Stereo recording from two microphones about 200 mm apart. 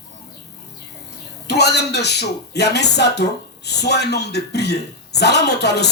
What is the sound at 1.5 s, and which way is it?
Speech, 55° left (ahead or behind).